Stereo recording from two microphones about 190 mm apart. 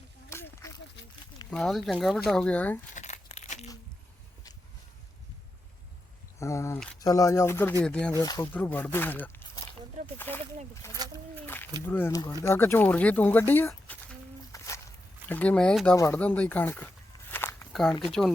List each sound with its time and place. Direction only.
0.3 s snake: 15° left (ahead or behind)
1.5 s speech: centre (ahead or behind)
2.9 s crumpling: 35° left (ahead or behind)
6.4 s speech: 15° left (ahead or behind)
8.2 s speech: 20° left (ahead or behind)
11.4 s a sound: 10° left (ahead or behind)
11.9 s speech: 10° left (ahead or behind)
14.5 s a sound: 15° left (ahead or behind)
15.3 s speech: 5° left (ahead or behind)
17.3 s walk: 10° left (ahead or behind)